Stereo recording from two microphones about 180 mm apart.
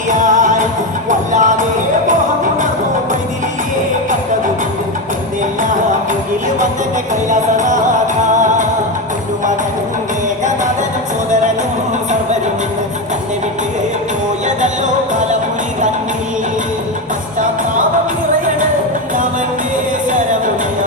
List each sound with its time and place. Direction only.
0.1 s music: 45° right (ahead or behind)
1.3 s a sound: 45° right (ahead or behind)
7.3 s music: 45° right (ahead or behind)